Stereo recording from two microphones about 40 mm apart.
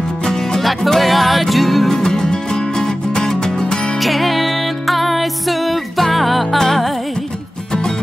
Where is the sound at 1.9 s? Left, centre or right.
Centre.